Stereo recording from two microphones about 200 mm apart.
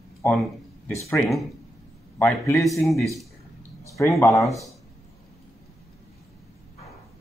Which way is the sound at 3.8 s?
15° left (ahead or behind).